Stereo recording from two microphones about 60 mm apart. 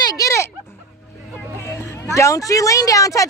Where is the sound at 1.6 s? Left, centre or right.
Left.